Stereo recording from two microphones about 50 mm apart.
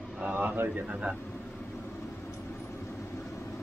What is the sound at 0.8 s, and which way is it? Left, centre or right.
Speech, right.